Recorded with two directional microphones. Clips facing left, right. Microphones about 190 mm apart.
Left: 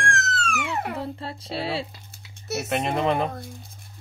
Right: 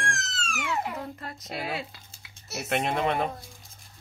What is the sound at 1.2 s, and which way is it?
Speech, 30° left (ahead or behind).